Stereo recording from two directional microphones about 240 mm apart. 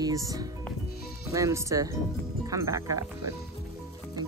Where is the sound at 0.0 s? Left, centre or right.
Centre.